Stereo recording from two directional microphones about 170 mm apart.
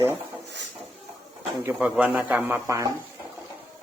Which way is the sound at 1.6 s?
10° right (ahead or behind).